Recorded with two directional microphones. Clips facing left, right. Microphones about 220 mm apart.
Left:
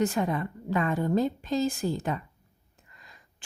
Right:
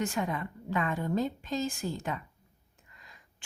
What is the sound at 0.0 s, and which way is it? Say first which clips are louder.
A woman's voice: left 5 dB; 40° left (ahead or behind).